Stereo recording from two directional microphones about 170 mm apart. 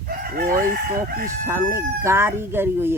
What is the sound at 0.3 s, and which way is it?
Chicken, 55° right (ahead or behind).